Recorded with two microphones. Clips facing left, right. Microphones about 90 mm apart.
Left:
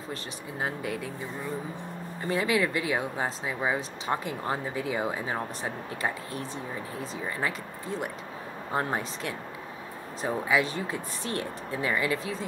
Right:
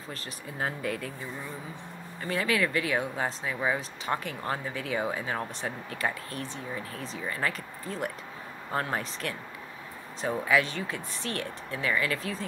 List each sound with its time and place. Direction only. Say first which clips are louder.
0.6 s speech: even; 15° left (ahead or behind)
2.2 s speech: left 2 dB; 20° left (ahead or behind)
7.2 s speech: even; 15° left (ahead or behind)
8.7 s speech: left 1 dB; 20° left (ahead or behind)